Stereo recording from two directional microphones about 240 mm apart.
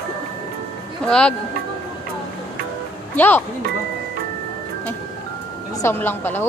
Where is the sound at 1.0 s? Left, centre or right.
Centre.